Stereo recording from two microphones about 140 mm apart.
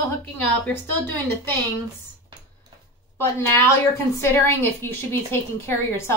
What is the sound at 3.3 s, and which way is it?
A woman's voice, 20° left (ahead or behind).